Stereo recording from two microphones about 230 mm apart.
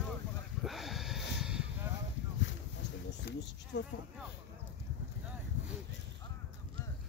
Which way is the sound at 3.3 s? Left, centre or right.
Left.